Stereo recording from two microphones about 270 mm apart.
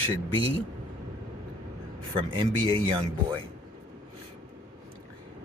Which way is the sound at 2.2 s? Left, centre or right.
Centre.